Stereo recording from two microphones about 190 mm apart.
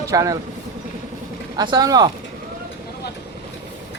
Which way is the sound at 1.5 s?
20° right (ahead or behind).